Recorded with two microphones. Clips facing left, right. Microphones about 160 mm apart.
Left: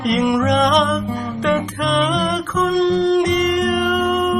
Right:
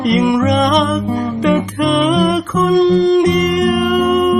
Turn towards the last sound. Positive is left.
turn(degrees=-5)  # may be behind; listen again after turning